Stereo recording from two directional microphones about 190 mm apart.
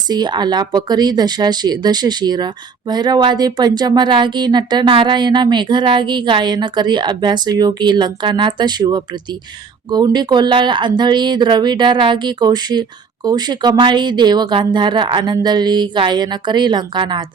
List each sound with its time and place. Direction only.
0.1 s speech: 20° right (ahead or behind)